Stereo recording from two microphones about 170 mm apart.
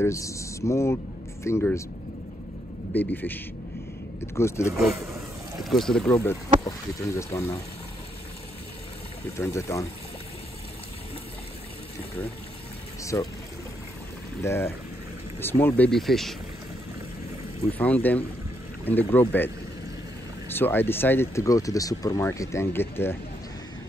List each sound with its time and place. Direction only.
0.0 s speech: 15° left (ahead or behind)
2.9 s speech: 10° left (ahead or behind)
4.4 s speech: 15° left (ahead or behind)
5.6 s speech: centre (ahead or behind)
6.6 s speech: 20° left (ahead or behind)
9.4 s speech: 15° left (ahead or behind)
13.0 s speech: 20° left (ahead or behind)
14.4 s speech: 15° left (ahead or behind)
17.7 s speech: 10° left (ahead or behind)
20.5 s speech: 10° left (ahead or behind)